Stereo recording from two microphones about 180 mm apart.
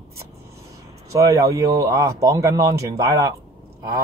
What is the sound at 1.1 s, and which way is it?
Speech, 20° right (ahead or behind).